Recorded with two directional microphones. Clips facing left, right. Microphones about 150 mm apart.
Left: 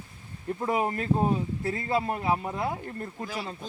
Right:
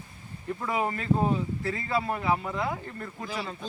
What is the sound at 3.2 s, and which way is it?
Speech, 10° left (ahead or behind).